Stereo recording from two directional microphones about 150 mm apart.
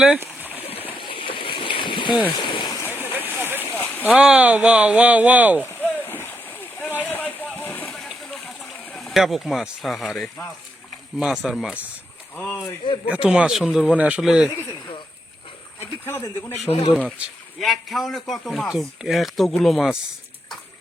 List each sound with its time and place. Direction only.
0.2 s stream: 10° right (ahead or behind)
0.9 s a sound: 35° left (ahead or behind)
2.9 s vehicle: 15° right (ahead or behind)
4.0 s speech: 5° right (ahead or behind)
5.6 s splash: 15° left (ahead or behind)
7.0 s a sound: 10° left (ahead or behind)
7.9 s a sound: centre (ahead or behind)
8.8 s speech: centre (ahead or behind)
12.4 s speech: 10° left (ahead or behind)
13.1 s speech: 5° right (ahead or behind)
16.0 s speech: 15° left (ahead or behind)
16.6 s speech: 45° left (ahead or behind)
16.9 s speech: 5° left (ahead or behind)